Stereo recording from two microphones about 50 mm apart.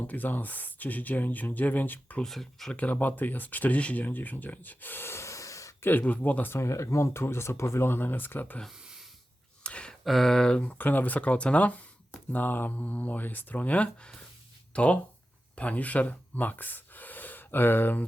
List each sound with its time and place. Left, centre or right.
0.1 s speech: left
2.2 s speech: centre
2.7 s speech: left
5.0 s snort: left
5.8 s speech: left
6.5 s speech: left
7.9 s speech: left
8.7 s a sound: centre
9.6 s a sound: left
9.9 s speech: centre
10.6 s speech: left